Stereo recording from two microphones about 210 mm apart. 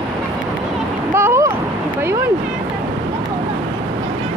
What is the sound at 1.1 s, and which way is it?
Vehicle, 10° right (ahead or behind).